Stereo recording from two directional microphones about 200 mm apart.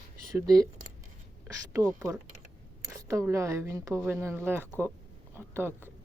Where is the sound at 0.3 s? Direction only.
15° right (ahead or behind).